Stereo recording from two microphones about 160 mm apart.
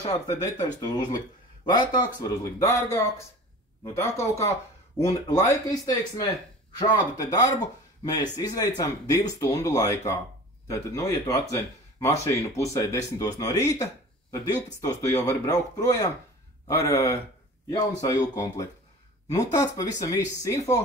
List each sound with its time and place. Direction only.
0.1 s speech: 20° left (ahead or behind)